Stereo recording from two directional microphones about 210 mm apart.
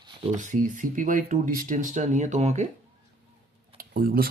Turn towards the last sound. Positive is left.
turn(degrees=-45)  # may be behind; listen again after turning